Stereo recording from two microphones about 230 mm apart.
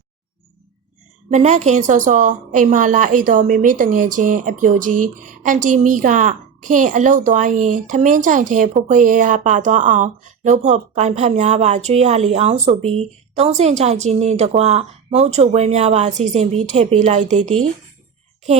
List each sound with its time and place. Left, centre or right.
1.3 s speech: right
4.9 s speech: right
5.2 s speech: right